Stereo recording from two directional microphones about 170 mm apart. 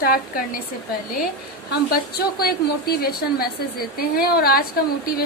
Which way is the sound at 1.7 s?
70° left (ahead or behind).